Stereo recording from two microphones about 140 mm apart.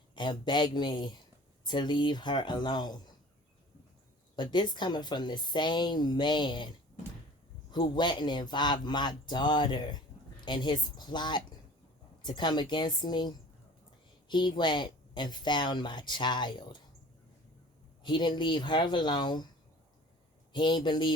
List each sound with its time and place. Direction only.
0.2 s a woman's voice: 35° left (ahead or behind)
4.4 s a woman's voice: 35° left (ahead or behind)
7.7 s a woman's voice: 35° left (ahead or behind)
18.0 s a woman's voice: 30° left (ahead or behind)
20.5 s a woman's voice: 35° left (ahead or behind)